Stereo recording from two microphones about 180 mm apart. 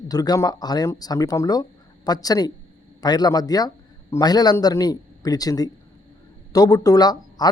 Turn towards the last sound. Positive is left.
turn(degrees=20)  # may be behind; listen again after turning